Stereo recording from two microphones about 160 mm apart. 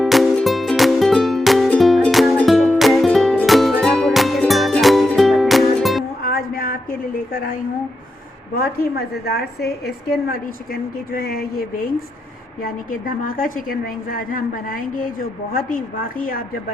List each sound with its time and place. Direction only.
0.0 s music: centre (ahead or behind)
6.2 s a sound: 65° left (ahead or behind)
8.5 s a woman's voice: 75° left (ahead or behind)